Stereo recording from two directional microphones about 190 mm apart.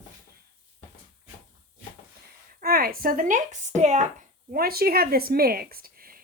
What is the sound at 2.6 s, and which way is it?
Speech, 50° right (ahead or behind).